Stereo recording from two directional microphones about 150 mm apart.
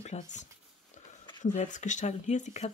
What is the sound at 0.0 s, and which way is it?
Speech, 50° left (ahead or behind).